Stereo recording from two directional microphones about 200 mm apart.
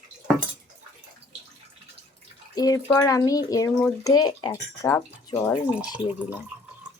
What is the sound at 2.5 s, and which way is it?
Speech, 20° left (ahead or behind).